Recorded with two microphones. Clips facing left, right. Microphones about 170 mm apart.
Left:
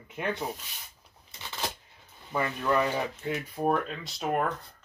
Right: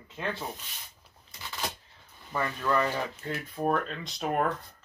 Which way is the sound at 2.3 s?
10° left (ahead or behind).